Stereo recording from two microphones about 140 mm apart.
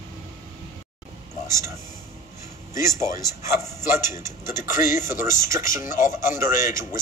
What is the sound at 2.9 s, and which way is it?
A man's voice, 20° right (ahead or behind).